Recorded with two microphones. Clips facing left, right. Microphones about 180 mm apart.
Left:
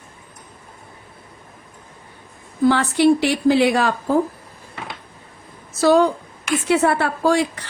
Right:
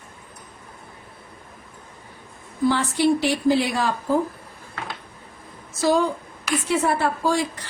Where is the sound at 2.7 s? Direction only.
65° left (ahead or behind).